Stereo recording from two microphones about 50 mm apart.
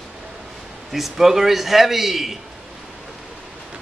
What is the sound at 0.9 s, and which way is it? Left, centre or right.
Speech, centre.